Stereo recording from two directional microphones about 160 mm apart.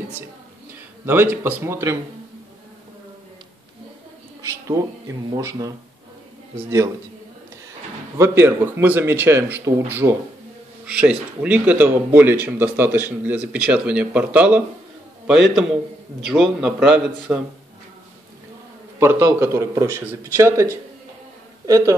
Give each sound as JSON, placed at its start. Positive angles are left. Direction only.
{"t": 1.0, "sound": "speech", "side_deg": -15}
{"t": 4.4, "sound": "speech", "side_deg": -20}
{"t": 8.2, "sound": "a man's voice", "side_deg": -15}
{"t": 18.9, "sound": "a woman's voice", "side_deg": -15}